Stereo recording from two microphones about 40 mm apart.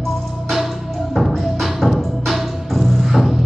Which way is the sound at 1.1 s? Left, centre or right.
Centre.